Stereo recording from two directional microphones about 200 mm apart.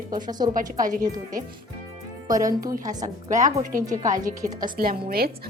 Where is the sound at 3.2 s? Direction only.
40° right (ahead or behind).